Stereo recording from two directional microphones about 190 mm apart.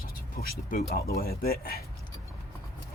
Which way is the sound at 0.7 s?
50° left (ahead or behind).